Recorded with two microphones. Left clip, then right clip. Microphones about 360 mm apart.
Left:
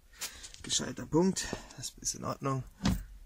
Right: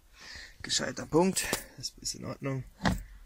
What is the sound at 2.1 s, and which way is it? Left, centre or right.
Speech, left.